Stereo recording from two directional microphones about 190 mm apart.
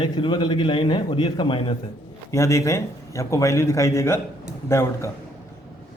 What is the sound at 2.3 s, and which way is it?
Speech, 15° left (ahead or behind).